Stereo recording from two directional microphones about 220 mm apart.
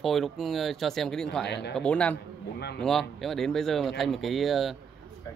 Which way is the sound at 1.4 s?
50° left (ahead or behind).